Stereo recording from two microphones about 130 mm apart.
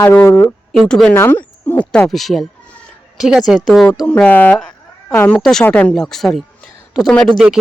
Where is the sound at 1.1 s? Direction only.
15° left (ahead or behind).